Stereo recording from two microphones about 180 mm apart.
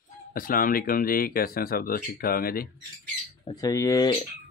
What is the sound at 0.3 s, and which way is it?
Speech, 50° left (ahead or behind).